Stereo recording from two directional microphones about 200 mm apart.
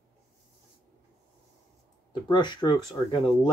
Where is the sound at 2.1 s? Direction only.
20° left (ahead or behind).